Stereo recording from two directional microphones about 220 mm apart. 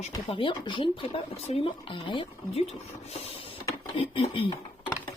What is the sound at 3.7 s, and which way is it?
Speech, 25° left (ahead or behind).